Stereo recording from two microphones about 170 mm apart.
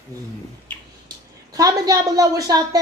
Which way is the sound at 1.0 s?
20° right (ahead or behind).